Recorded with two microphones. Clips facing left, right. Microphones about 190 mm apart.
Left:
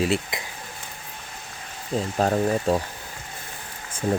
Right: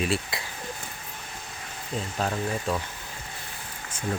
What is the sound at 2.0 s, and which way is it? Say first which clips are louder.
Speech: left 7 dB; 40° left (ahead or behind).